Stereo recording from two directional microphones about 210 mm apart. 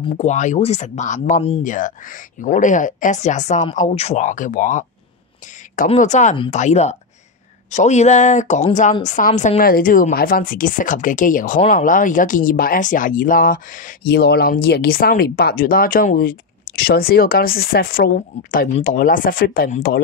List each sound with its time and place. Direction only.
0.1 s speech: 35° left (ahead or behind)
5.9 s speech: 35° left (ahead or behind)